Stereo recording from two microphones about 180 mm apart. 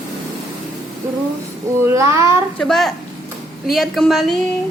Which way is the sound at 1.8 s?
15° right (ahead or behind).